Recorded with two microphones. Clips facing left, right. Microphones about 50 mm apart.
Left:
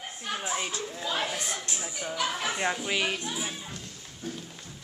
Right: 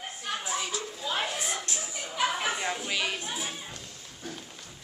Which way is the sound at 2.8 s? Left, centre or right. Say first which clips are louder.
Left 2 dB; centre.